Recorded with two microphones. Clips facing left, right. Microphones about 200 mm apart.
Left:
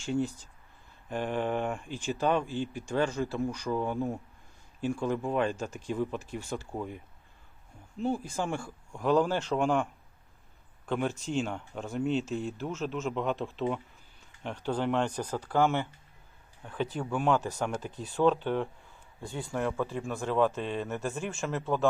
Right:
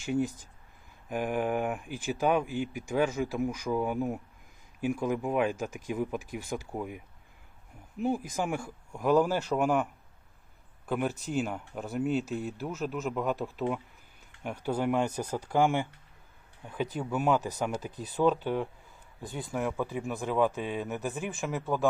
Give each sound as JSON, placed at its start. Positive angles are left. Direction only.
{"t": 0.1, "sound": "a man's voice", "side_deg": -15}